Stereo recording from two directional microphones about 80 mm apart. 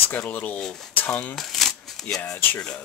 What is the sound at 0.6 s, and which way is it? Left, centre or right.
Speech, centre.